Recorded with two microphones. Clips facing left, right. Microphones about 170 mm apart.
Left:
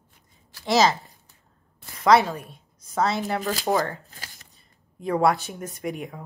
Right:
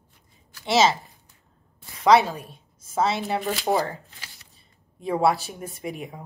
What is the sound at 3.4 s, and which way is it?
Speech, 40° left (ahead or behind).